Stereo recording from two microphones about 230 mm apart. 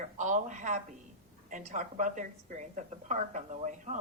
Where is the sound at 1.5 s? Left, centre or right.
Right.